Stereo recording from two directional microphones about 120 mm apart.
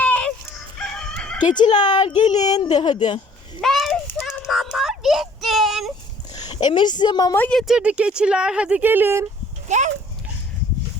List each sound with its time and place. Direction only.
0.0 s crowing: 10° left (ahead or behind)
1.5 s speech: 35° left (ahead or behind)
3.6 s a sound: centre (ahead or behind)
6.3 s a woman's voice: 35° left (ahead or behind)
7.3 s speech: 15° left (ahead or behind)
7.7 s speech: 10° right (ahead or behind)
9.6 s speech: 85° right